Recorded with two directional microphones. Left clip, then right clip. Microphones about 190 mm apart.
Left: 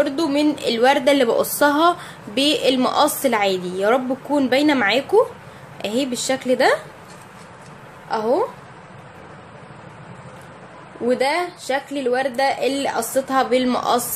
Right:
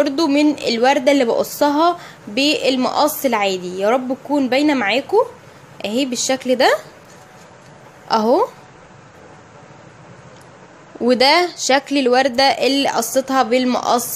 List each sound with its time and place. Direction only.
0.0 s a woman's voice: 30° right (ahead or behind)
8.1 s a woman's voice: 40° right (ahead or behind)
11.1 s a woman's voice: 45° right (ahead or behind); by 14.0 s 25° right (ahead or behind)